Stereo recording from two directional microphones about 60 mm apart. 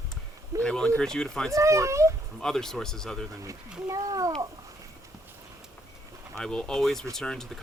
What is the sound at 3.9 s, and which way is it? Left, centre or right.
Speech, right.